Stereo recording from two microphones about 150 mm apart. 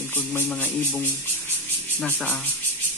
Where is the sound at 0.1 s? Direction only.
10° left (ahead or behind).